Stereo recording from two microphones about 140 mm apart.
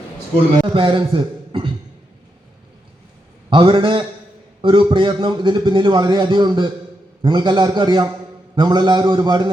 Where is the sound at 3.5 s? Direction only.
40° right (ahead or behind).